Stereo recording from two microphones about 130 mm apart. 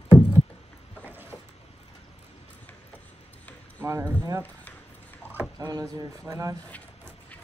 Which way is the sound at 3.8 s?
20° right (ahead or behind).